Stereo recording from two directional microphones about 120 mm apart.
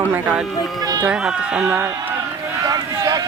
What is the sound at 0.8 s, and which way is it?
Run, 30° right (ahead or behind).